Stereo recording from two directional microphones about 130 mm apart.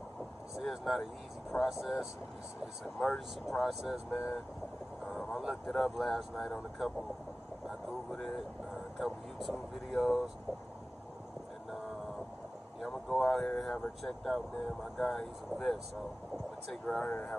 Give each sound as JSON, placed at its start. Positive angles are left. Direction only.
{"t": 0.6, "sound": "vehicle", "side_deg": 0}
{"t": 1.5, "sound": "speech", "side_deg": 0}
{"t": 8.1, "sound": "speech", "side_deg": 5}
{"t": 12.8, "sound": "speech", "side_deg": 0}
{"t": 16.8, "sound": "speech", "side_deg": 10}